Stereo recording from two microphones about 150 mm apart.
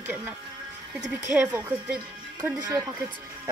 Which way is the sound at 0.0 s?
15° right (ahead or behind).